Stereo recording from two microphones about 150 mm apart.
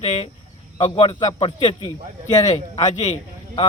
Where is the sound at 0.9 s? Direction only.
30° left (ahead or behind).